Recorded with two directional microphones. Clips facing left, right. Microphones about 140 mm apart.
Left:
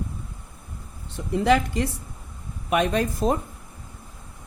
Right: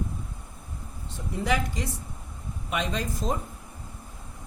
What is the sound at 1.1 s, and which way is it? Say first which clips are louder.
Speech: left 8 dB; 65° left (ahead or behind).